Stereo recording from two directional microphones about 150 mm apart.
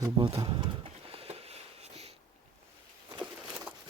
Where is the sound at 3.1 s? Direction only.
30° right (ahead or behind).